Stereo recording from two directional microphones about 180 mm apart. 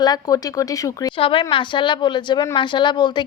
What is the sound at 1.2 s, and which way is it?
A woman's voice, 30° left (ahead or behind).